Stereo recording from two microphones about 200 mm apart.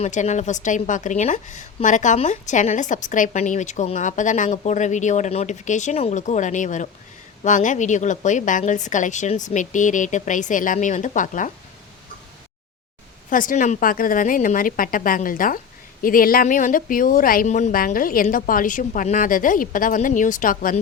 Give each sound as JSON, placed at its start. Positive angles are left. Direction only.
{"t": 0.0, "sound": "a woman's voice", "side_deg": 35}
{"t": 13.3, "sound": "a woman's voice", "side_deg": 40}